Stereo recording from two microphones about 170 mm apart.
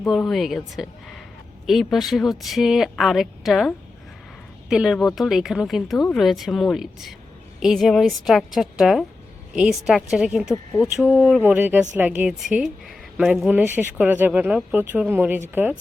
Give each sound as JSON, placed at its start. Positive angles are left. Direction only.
{"t": 0.0, "sound": "speech", "side_deg": 0}
{"t": 10.5, "sound": "speech", "side_deg": 20}
{"t": 11.3, "sound": "speech", "side_deg": -10}